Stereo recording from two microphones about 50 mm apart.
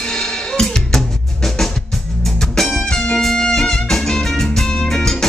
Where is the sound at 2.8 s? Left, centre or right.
Centre.